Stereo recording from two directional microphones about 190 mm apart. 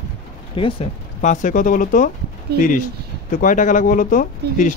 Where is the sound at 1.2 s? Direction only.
40° left (ahead or behind).